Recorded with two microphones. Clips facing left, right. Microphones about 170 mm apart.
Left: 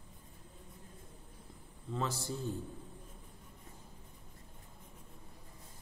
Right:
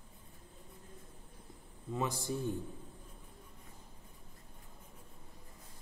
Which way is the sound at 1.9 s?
15° right (ahead or behind).